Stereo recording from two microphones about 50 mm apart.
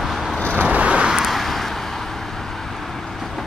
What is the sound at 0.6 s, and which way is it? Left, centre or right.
Vehicle, right.